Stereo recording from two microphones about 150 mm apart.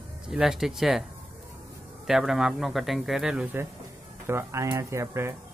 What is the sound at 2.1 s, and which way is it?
Speech, 5° right (ahead or behind).